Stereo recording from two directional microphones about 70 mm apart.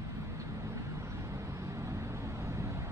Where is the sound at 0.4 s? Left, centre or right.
Right.